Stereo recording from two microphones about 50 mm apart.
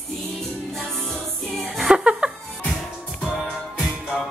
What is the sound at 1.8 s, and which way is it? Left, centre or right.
Music, centre.